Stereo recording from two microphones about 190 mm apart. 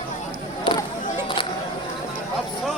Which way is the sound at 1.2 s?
25° left (ahead or behind).